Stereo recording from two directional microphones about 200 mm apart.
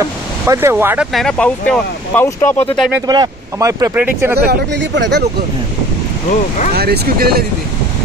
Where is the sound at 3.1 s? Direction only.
20° right (ahead or behind).